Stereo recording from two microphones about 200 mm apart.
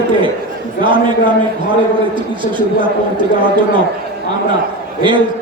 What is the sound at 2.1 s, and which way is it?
Speech, 25° right (ahead or behind).